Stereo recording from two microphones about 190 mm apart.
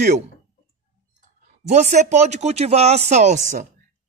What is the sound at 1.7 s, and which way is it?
Speech, 40° right (ahead or behind).